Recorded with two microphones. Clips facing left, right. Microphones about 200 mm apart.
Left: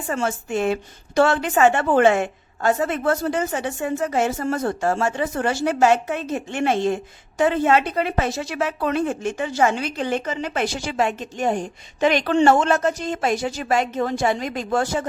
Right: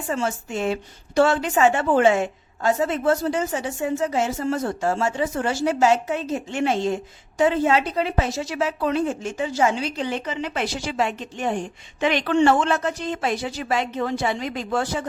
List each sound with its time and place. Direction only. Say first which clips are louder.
0.1 s a woman's voice: left 2 dB; 55° left (ahead or behind)